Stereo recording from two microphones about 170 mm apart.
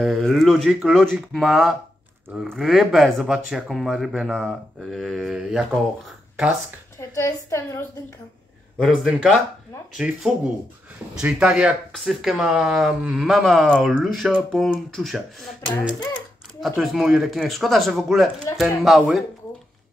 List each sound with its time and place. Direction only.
0.0 s speech: centre (ahead or behind)
6.0 s a sound: centre (ahead or behind)
7.0 s a woman's voice: 15° left (ahead or behind)
8.7 s speech: centre (ahead or behind)